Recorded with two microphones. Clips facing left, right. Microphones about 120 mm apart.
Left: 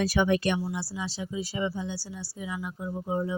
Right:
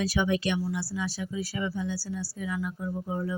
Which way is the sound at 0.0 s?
55° left (ahead or behind).